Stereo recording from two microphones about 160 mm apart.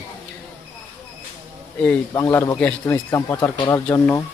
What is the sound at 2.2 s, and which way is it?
Speech, 20° left (ahead or behind).